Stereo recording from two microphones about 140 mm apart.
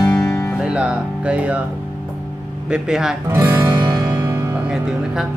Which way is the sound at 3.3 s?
15° right (ahead or behind).